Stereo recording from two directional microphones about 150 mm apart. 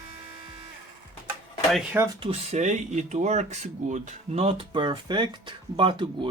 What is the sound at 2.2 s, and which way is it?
Speech, 45° right (ahead or behind).